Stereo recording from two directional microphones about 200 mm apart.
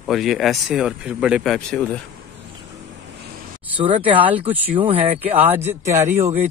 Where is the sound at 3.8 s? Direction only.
25° right (ahead or behind).